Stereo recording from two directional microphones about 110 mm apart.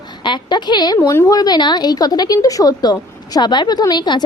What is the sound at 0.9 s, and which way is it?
A woman's voice, 30° left (ahead or behind).